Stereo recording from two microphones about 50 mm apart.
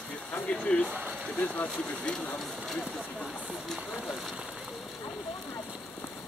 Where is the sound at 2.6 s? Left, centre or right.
Centre.